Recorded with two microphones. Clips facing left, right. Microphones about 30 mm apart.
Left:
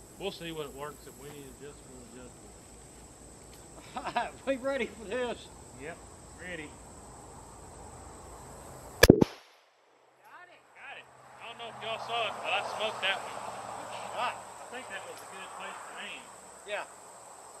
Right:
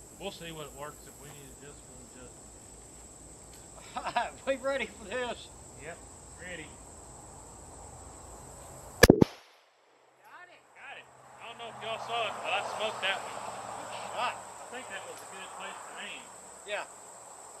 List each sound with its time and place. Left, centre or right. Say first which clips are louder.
0.2 s speech: left 4 dB; centre
3.8 s speech: right 1 dB; centre
5.9 s speech: left 1 dB; centre
8.2 s chop: left 1 dB; left
10.3 s a sound: even; centre
12.1 s speech: even; centre
13.4 s a sound: even; centre
15.4 s speech: even; centre
16.9 s a sound: even; left
17.3 s cricket: even; centre